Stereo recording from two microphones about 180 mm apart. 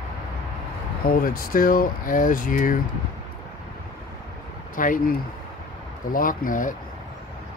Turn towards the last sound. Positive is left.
turn(degrees=50)  # may be behind; listen again after turning